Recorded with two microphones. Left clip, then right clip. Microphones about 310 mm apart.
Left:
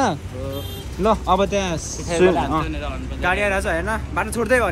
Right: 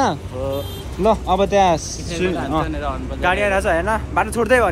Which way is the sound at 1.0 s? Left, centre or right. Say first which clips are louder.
Right 1 dB; centre.